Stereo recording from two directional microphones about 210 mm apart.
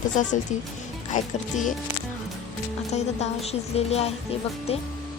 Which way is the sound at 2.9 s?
30° left (ahead or behind).